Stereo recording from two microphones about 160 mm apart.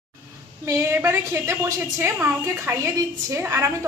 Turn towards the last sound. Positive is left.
turn(degrees=-15)  # may be behind; listen again after turning